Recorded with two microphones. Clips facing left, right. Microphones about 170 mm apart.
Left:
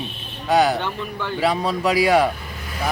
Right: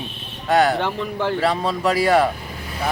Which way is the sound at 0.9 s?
85° right.